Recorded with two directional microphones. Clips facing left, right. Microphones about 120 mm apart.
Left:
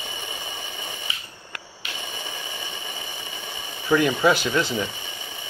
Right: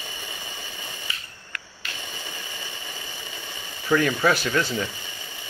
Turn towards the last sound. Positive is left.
turn(degrees=20)  # may be behind; listen again after turning